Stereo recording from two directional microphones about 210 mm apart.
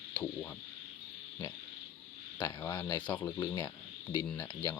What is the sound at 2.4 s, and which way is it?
Speech, 15° left (ahead or behind).